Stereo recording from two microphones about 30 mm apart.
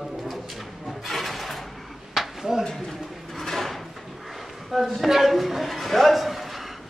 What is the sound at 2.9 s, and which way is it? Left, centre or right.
Bird, centre.